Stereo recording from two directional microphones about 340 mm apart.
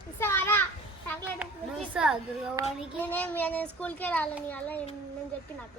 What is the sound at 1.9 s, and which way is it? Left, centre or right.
Speech, centre.